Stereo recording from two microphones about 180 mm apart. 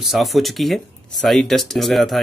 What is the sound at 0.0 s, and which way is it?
Speech, centre (ahead or behind).